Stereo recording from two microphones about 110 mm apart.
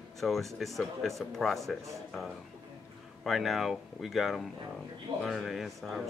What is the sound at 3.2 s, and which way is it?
Speech, centre (ahead or behind).